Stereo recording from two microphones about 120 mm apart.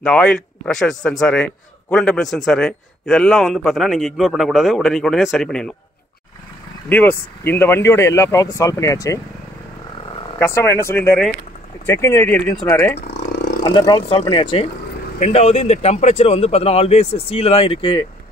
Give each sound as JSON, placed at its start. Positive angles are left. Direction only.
{"t": 0.0, "sound": "a man's voice", "side_deg": 5}
{"t": 6.9, "sound": "speech", "side_deg": 15}
{"t": 10.4, "sound": "speech", "side_deg": 20}
{"t": 12.6, "sound": "speech", "side_deg": 25}
{"t": 13.7, "sound": "speech", "side_deg": 40}
{"t": 15.1, "sound": "a man's voice", "side_deg": 65}